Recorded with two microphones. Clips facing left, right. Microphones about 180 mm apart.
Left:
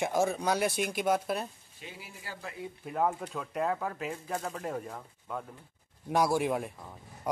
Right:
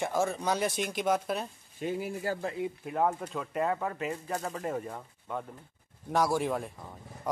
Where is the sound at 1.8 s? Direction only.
50° right (ahead or behind).